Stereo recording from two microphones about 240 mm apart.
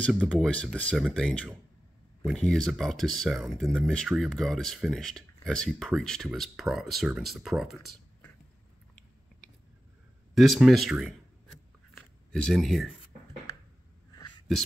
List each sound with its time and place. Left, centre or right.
0.0 s speech: centre
10.3 s speech: centre
12.3 s speech: centre